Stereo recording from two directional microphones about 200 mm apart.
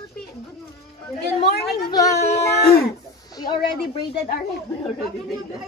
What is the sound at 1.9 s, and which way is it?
Speech, 15° left (ahead or behind).